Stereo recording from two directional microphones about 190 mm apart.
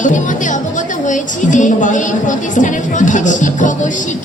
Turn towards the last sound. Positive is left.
turn(degrees=40)  # may be behind; listen again after turning